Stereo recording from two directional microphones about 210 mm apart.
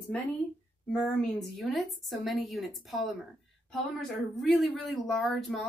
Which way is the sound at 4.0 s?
Centre (ahead or behind).